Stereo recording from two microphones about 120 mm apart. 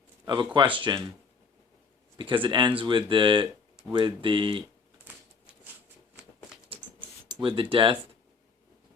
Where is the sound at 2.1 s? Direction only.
45° right (ahead or behind).